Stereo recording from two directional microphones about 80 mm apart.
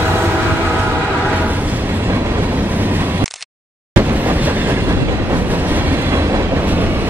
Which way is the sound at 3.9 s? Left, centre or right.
Right.